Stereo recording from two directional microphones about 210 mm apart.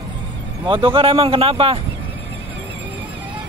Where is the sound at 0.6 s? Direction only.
25° right (ahead or behind).